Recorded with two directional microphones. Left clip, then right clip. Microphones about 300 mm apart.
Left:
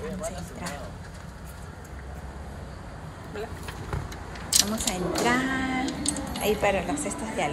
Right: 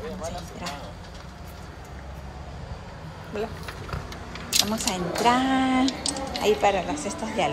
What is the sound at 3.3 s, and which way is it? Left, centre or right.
Speech, centre.